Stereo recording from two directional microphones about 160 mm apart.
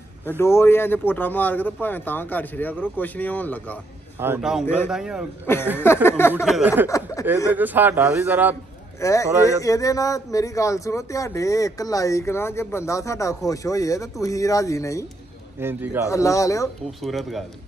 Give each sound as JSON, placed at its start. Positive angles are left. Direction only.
{"t": 0.4, "sound": "speech", "side_deg": 15}
{"t": 4.4, "sound": "a man's voice", "side_deg": -5}
{"t": 6.0, "sound": "speech", "side_deg": 15}
{"t": 6.4, "sound": "a man's voice", "side_deg": -5}
{"t": 9.0, "sound": "speech", "side_deg": 20}
{"t": 15.6, "sound": "a man's voice", "side_deg": -15}
{"t": 16.1, "sound": "speech", "side_deg": 20}
{"t": 17.0, "sound": "a man's voice", "side_deg": 0}